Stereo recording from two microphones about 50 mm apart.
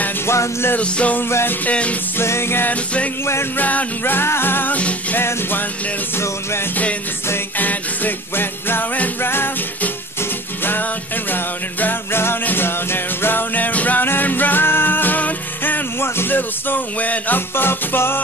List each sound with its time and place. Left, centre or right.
0.3 s music: left
0.7 s music: left
1.3 s music: left
1.7 s music: left
2.1 s music: left
2.7 s music: left
4.0 s music: left
6.1 s music: left
7.5 s music: left
10.6 s music: left
16.0 s music: left
17.6 s music: left